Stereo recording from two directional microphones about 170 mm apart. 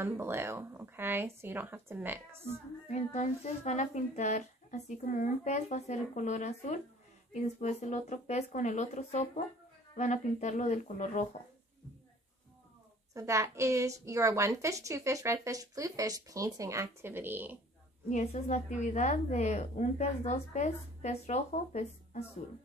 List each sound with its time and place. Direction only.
0.0 s a woman's voice: 15° right (ahead or behind)
2.9 s a woman's voice: 45° left (ahead or behind)
13.1 s a woman's voice: 15° right (ahead or behind)
18.1 s a woman's voice: 40° left (ahead or behind)